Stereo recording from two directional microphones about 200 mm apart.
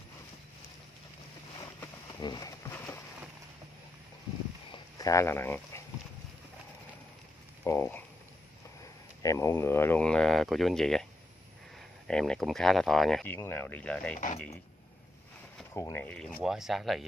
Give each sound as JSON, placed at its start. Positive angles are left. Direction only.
{"t": 2.1, "sound": "a sound", "side_deg": 20}
{"t": 4.9, "sound": "speech", "side_deg": 15}
{"t": 7.6, "sound": "speech", "side_deg": 10}
{"t": 9.2, "sound": "speech", "side_deg": 15}
{"t": 12.1, "sound": "speech", "side_deg": 5}
{"t": 14.1, "sound": "speech", "side_deg": 40}
{"t": 15.7, "sound": "speech", "side_deg": 15}